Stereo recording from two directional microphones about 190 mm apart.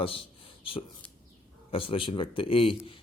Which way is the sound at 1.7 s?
30° left (ahead or behind).